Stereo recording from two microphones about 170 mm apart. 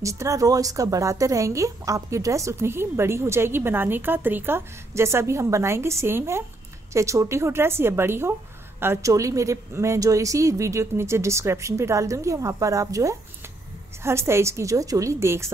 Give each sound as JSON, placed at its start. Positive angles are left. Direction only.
{"t": 0.0, "sound": "a woman's voice", "side_deg": -20}